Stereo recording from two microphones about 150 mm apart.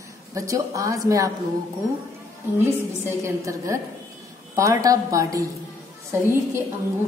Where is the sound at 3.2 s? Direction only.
20° right (ahead or behind).